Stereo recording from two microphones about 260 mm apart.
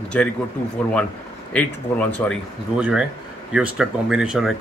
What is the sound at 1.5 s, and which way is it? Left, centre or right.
A man's voice, centre.